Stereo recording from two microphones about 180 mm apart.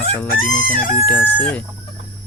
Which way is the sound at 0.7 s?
50° left (ahead or behind).